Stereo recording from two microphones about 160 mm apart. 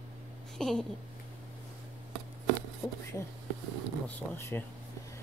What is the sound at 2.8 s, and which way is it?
Speech, 20° left (ahead or behind).